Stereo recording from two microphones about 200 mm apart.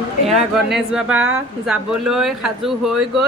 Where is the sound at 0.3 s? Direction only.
Centre (ahead or behind).